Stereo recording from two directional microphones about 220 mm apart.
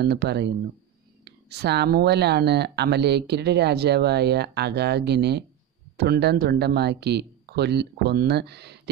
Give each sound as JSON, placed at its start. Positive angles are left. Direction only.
{"t": 0.0, "sound": "speech", "side_deg": -50}